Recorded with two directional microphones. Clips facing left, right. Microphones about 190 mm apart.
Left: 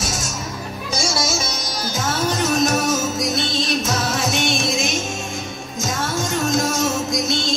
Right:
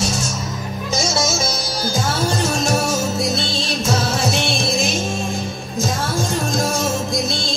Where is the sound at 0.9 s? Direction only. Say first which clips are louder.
Right 2 dB; 25° right (ahead or behind).